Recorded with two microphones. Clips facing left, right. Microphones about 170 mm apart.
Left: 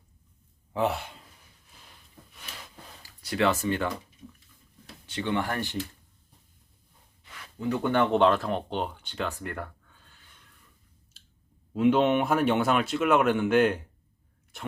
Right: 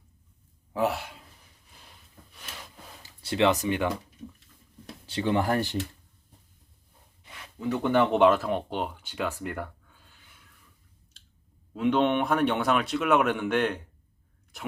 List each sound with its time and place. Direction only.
0.7 s speech: centre (ahead or behind)
3.0 s speech: 25° right (ahead or behind)
5.0 s speech: 35° right (ahead or behind)
7.6 s speech: centre (ahead or behind)
11.7 s speech: 5° left (ahead or behind)